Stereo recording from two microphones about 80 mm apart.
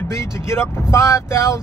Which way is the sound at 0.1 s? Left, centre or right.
Left.